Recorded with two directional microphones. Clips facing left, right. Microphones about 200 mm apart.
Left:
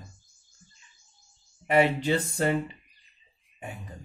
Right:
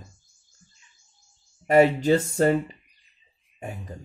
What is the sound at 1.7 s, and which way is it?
Speech, 40° right (ahead or behind).